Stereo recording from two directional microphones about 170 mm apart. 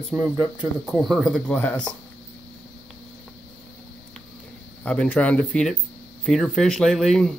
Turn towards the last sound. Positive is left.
turn(degrees=0)  # may be behind; listen again after turning